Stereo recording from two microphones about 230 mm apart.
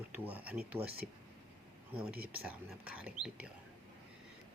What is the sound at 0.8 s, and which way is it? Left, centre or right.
Speech, right.